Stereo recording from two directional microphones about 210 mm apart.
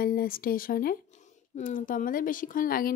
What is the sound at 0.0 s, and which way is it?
A woman's voice, 45° left (ahead or behind).